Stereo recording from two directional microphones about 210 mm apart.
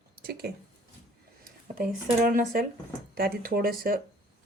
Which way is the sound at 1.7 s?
40° right (ahead or behind).